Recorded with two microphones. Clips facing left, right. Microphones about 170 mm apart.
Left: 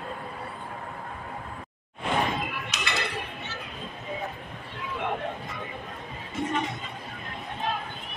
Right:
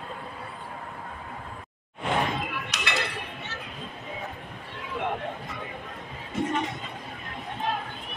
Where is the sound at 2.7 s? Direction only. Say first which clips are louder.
Even; 70° right (ahead or behind).